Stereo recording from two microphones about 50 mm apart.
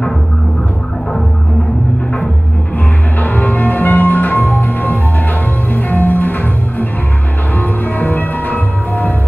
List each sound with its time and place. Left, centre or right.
3.2 s music: left